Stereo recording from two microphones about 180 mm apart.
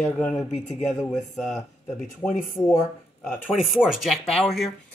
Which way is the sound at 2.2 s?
25° left (ahead or behind).